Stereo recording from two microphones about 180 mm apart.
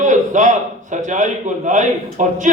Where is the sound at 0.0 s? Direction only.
45° right (ahead or behind).